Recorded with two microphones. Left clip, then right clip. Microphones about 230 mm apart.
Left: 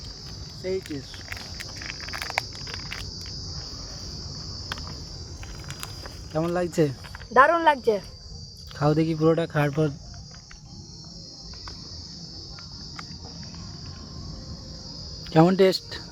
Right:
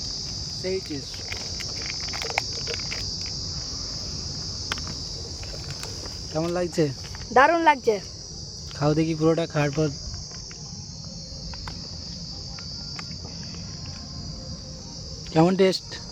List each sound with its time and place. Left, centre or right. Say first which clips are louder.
0.6 s speech: left 1 dB; centre
1.3 s a sound: right 4 dB; left
6.3 s cricket: left 1 dB; centre
7.3 s speech: even; centre
8.8 s cricket: even; centre
15.3 s cricket: left 1 dB; centre